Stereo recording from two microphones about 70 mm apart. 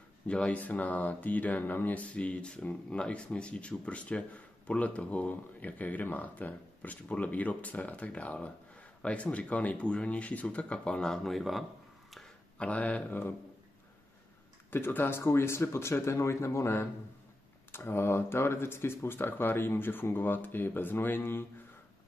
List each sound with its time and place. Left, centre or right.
0.3 s speech: centre
12.5 s speech: centre
14.7 s speech: left